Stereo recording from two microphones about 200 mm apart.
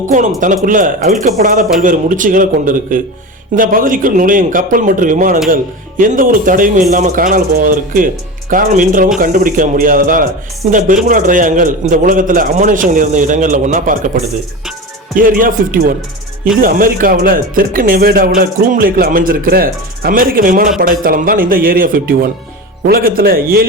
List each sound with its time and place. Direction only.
0.3 s a man's voice: 40° right (ahead or behind)